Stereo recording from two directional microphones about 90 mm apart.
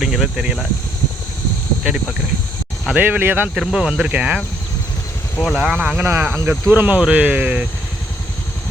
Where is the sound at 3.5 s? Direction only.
5° right (ahead or behind).